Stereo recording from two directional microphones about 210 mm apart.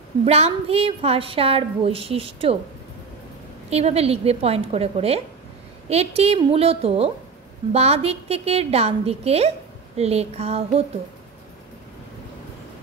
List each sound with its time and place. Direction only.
0.2 s a woman's voice: 30° right (ahead or behind)
3.7 s a woman's voice: 30° right (ahead or behind)